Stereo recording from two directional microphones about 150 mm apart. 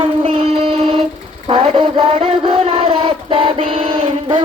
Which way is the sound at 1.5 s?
35° right (ahead or behind).